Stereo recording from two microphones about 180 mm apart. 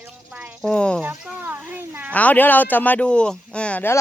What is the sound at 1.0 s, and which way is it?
Speech, 10° right (ahead or behind).